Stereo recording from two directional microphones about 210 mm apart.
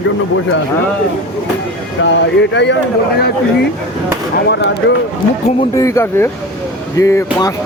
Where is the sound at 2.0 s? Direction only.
55° left (ahead or behind).